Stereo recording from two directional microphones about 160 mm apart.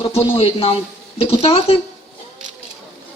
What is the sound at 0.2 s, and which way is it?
Speech, 35° left (ahead or behind).